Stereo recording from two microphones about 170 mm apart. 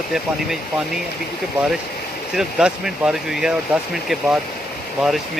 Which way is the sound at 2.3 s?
5° right (ahead or behind).